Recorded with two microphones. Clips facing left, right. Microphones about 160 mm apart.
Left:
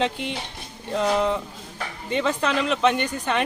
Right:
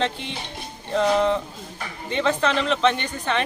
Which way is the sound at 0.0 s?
5° left (ahead or behind).